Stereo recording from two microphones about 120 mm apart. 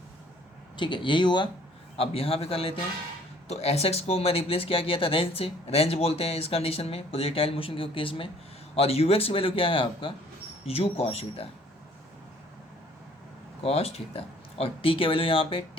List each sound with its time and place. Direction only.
0.8 s speech: 40° left (ahead or behind)
2.0 s speech: 50° left (ahead or behind)
13.6 s speech: 55° left (ahead or behind)